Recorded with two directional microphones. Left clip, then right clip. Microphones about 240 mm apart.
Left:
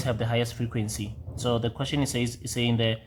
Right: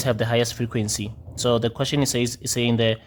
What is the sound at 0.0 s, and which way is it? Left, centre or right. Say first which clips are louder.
Speech: right 6 dB; right.